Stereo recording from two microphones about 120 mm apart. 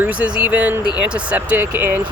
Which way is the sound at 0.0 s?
10° right (ahead or behind).